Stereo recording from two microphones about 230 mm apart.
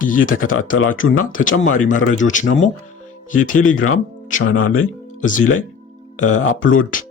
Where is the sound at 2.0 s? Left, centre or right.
Left.